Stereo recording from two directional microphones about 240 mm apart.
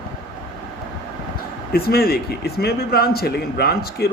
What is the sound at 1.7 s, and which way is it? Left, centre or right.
Speech, left.